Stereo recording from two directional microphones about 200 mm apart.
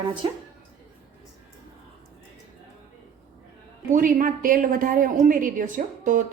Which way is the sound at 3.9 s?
40° right (ahead or behind).